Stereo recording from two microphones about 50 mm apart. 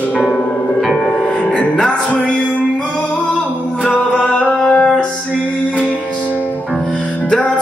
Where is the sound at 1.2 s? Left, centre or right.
Left.